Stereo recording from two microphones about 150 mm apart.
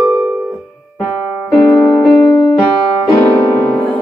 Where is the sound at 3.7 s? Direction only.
5° left (ahead or behind).